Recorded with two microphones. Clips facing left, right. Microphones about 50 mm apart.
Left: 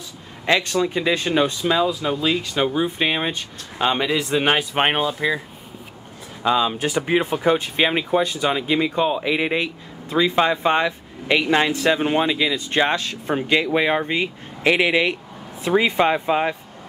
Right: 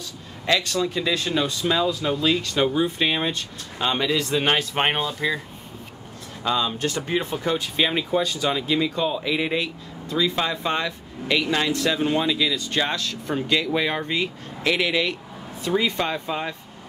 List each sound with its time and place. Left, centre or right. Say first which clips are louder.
0.5 s speech: left 3 dB; left
6.4 s speech: left 4 dB; centre